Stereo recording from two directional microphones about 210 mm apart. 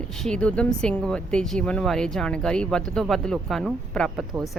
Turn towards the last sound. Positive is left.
turn(degrees=0)  # may be behind; listen again after turning